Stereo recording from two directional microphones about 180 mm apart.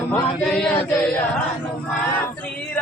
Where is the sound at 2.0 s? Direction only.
10° left (ahead or behind).